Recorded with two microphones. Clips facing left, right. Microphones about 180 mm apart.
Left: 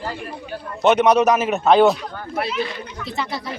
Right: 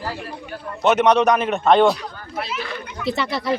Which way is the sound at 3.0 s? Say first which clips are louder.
Right 5 dB; 75° right (ahead or behind).